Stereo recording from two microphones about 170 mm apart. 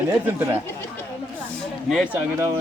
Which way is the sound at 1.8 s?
5° right (ahead or behind).